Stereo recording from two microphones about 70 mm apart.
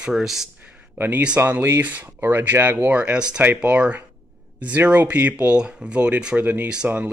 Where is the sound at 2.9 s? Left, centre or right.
Centre.